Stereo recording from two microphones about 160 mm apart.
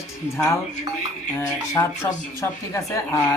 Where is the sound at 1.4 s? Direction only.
20° left (ahead or behind).